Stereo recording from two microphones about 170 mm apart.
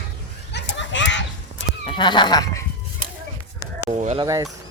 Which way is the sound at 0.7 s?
90° left.